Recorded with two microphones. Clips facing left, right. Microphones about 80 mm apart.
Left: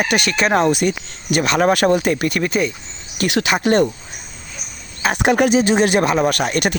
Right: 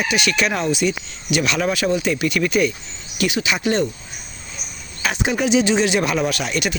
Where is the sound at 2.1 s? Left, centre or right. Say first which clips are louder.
Even; left.